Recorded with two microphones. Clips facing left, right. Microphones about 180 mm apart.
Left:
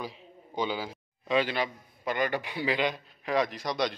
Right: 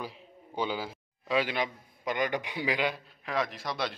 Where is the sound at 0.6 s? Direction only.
10° right (ahead or behind).